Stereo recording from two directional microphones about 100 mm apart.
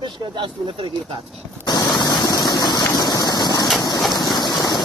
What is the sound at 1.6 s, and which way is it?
Vehicle, 45° left (ahead or behind).